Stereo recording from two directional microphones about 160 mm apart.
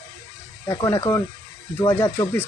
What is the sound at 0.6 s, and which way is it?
Speech, 15° left (ahead or behind).